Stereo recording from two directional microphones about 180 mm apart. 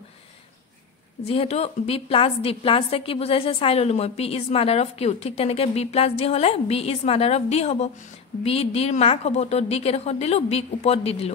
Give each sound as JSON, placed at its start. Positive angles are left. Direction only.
{"t": 1.2, "sound": "a woman's voice", "side_deg": 35}